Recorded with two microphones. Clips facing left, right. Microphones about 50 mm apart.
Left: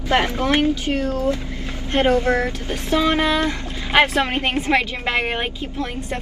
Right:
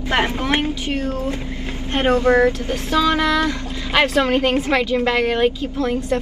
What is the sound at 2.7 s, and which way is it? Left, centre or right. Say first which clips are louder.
A woman's voice: right 1 dB; left.